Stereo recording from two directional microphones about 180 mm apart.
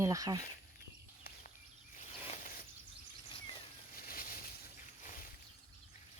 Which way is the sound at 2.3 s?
50° left (ahead or behind).